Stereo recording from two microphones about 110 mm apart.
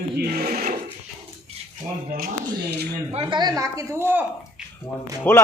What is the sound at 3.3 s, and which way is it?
Speech, 35° right (ahead or behind).